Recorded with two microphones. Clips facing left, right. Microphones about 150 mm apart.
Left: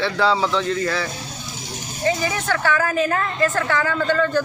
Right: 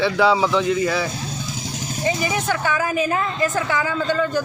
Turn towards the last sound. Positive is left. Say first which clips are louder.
# left 1 dB
turn(degrees=-10)  # may be behind; listen again after turning